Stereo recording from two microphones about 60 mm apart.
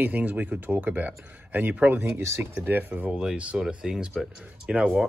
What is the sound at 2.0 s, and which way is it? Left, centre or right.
Speech, right.